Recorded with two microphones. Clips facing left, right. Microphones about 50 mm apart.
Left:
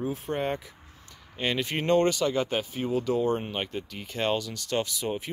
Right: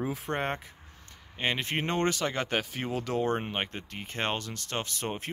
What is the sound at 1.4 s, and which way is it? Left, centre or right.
Speech, right.